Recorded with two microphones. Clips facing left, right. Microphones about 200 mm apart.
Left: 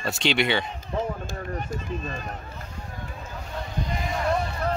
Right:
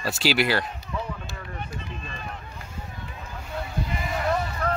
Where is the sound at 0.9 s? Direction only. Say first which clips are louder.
Left 4 dB; 45° left (ahead or behind).